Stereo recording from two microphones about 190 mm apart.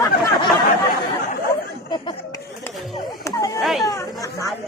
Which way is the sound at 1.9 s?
25° left (ahead or behind).